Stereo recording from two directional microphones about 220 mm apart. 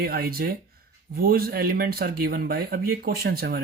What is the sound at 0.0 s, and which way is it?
Speech, 45° right (ahead or behind).